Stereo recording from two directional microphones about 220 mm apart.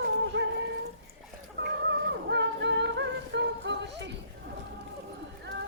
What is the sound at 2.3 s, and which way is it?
Music, 55° right (ahead or behind).